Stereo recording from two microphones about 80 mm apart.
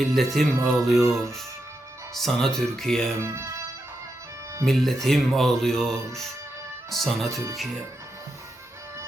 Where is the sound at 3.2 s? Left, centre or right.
Right.